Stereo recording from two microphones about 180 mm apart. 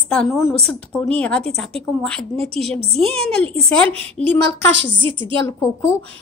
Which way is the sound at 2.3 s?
35° right (ahead or behind).